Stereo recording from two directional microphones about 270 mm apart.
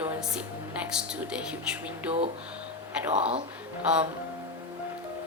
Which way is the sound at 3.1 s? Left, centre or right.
Right.